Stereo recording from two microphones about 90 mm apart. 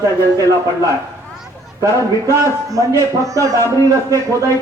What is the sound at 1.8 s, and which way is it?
A man's voice, 35° right (ahead or behind).